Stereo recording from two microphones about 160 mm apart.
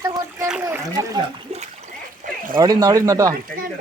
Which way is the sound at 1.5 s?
40° right (ahead or behind).